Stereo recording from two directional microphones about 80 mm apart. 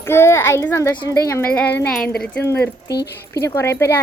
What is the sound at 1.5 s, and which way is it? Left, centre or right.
Speech, centre.